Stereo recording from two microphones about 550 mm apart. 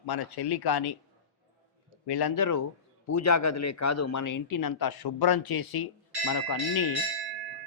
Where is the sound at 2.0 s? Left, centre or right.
Left.